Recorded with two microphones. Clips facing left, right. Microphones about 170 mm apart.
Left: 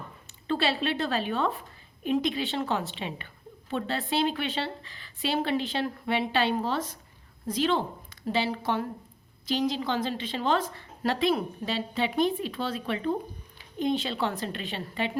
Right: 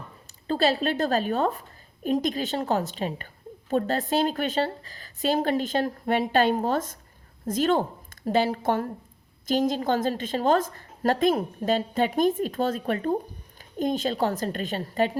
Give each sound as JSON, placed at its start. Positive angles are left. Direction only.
{"t": 0.4, "sound": "a woman's voice", "side_deg": -40}